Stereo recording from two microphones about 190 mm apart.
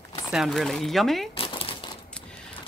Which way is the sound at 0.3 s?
Centre (ahead or behind).